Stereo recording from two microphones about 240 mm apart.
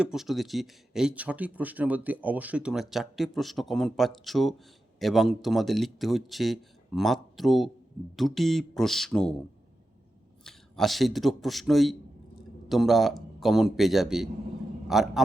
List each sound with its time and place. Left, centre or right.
0.0 s speech: centre
10.4 s a man's voice: centre